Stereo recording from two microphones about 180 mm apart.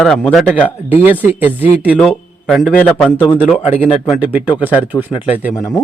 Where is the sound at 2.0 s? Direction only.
Centre (ahead or behind).